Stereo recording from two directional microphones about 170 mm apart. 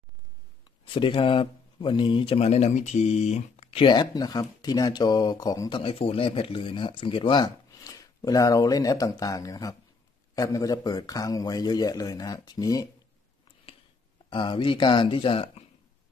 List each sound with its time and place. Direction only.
0.9 s speech: 30° left (ahead or behind)
14.3 s speech: 30° left (ahead or behind)